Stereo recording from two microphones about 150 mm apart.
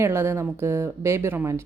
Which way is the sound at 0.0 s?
15° right (ahead or behind).